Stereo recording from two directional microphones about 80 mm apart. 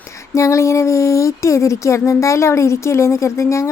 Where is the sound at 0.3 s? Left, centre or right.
Left.